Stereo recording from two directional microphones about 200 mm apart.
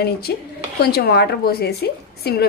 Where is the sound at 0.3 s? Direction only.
55° left (ahead or behind).